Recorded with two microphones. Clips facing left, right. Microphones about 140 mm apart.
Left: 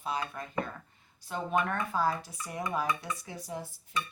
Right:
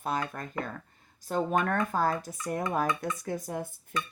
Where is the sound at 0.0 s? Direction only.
50° right (ahead or behind).